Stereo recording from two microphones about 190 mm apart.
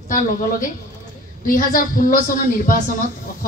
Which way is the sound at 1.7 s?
45° left (ahead or behind).